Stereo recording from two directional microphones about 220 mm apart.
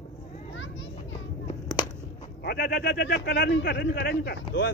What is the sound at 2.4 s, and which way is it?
Speech, 45° left (ahead or behind).